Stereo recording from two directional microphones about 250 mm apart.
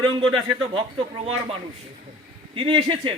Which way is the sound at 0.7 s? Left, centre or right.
Right.